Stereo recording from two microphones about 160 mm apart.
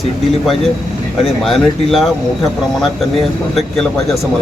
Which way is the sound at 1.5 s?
Centre (ahead or behind).